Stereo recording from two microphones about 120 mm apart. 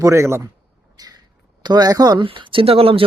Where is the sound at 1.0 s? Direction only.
35° right (ahead or behind).